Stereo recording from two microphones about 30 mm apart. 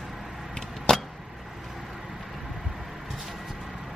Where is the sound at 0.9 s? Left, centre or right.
Centre.